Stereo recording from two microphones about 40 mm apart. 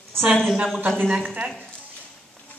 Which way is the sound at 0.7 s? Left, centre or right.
Right.